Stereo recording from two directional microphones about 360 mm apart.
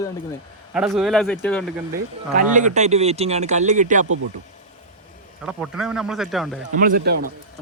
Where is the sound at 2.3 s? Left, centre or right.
Right.